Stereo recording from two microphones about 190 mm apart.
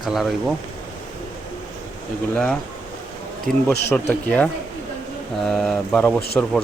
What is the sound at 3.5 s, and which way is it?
Speech, 45° right (ahead or behind).